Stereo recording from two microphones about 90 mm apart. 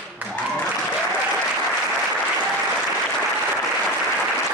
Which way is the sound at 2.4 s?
15° right (ahead or behind).